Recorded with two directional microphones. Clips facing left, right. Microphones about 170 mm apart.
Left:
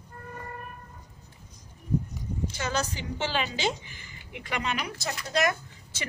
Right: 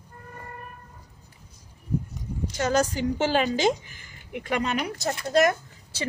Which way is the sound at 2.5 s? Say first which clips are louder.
Right 9 dB; 45° right (ahead or behind).